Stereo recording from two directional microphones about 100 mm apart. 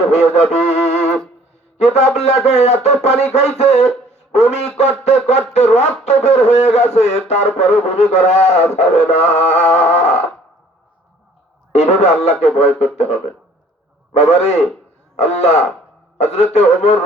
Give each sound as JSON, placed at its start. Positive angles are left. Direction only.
{"t": 0.1, "sound": "music", "side_deg": 90}
{"t": 1.8, "sound": "speech", "side_deg": 90}
{"t": 11.7, "sound": "speech", "side_deg": 90}